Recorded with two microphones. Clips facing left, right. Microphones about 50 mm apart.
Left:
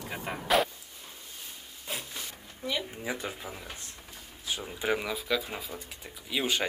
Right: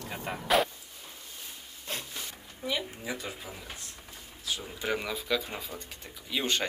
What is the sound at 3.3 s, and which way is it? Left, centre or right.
Speech, centre.